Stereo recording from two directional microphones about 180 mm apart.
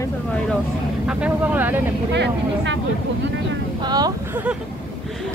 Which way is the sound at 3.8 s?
20° right (ahead or behind).